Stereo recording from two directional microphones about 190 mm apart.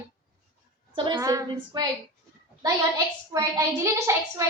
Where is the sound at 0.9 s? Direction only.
25° right (ahead or behind).